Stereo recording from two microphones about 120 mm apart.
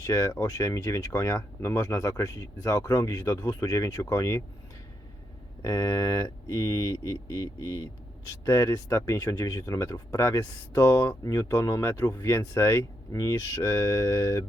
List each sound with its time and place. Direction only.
0.0 s speech: 25° left (ahead or behind)
5.6 s speech: 30° left (ahead or behind)